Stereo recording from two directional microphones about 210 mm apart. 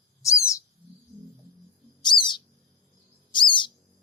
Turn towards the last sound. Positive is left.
turn(degrees=20)  # may be behind; listen again after turning